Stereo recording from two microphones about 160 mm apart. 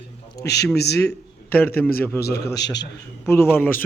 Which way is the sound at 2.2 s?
85° left.